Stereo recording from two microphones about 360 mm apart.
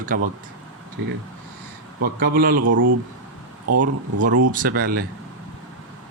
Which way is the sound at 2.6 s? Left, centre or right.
Right.